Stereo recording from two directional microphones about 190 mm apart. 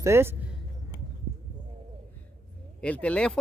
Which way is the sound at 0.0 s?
15° right (ahead or behind).